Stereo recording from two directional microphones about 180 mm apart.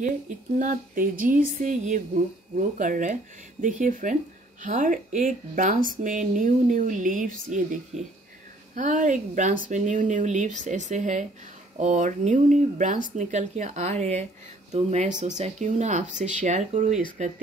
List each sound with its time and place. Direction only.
0.6 s speech: 50° right (ahead or behind)